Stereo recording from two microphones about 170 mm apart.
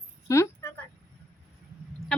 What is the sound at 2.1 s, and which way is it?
Goose, 5° left (ahead or behind).